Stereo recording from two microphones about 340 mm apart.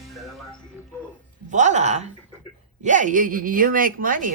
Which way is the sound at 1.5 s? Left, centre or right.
Right.